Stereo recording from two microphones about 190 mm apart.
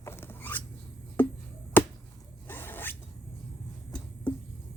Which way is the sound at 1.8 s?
10° left (ahead or behind).